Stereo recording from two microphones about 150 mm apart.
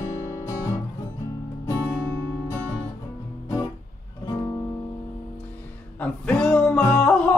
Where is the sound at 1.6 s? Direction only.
20° left (ahead or behind).